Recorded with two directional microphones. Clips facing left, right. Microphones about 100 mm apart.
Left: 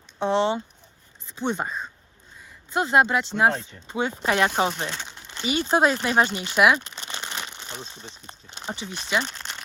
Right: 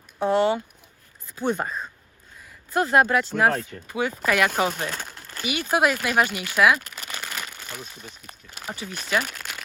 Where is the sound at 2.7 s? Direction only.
20° left (ahead or behind).